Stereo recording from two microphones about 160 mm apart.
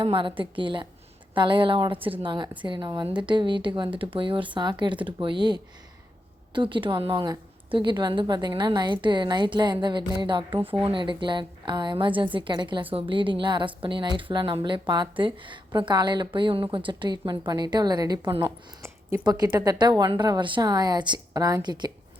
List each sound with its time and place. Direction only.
0.0 s a woman's voice: 30° right (ahead or behind)
10.6 s speech: 10° right (ahead or behind)
10.8 s a woman's voice: 30° right (ahead or behind)